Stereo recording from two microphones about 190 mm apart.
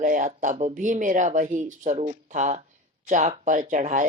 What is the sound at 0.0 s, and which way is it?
Speech, 40° right (ahead or behind).